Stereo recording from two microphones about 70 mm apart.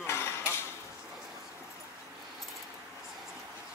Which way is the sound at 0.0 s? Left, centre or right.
Left.